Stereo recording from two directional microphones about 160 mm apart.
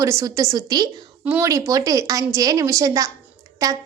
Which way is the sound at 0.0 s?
20° right (ahead or behind).